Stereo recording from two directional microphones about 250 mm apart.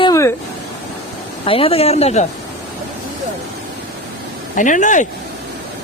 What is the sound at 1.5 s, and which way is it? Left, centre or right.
Speech, left.